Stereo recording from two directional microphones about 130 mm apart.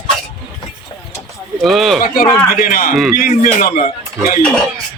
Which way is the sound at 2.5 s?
90° left.